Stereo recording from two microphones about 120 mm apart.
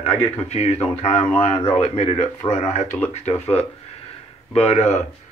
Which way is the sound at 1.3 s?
50° left (ahead or behind).